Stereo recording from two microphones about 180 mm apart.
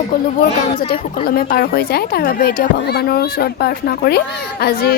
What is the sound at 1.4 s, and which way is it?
A woman's voice, 55° left (ahead or behind).